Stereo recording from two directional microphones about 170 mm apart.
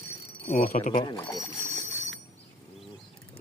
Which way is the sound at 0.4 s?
45° left (ahead or behind).